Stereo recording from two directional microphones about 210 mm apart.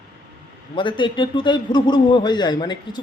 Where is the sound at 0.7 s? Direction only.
25° left (ahead or behind).